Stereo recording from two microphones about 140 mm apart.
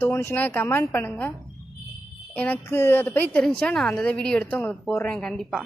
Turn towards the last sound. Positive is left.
turn(degrees=5)  # may be behind; listen again after turning